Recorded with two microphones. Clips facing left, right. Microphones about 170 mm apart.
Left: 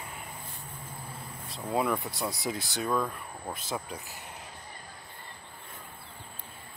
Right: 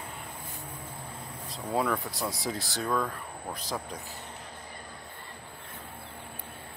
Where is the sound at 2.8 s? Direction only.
15° left (ahead or behind).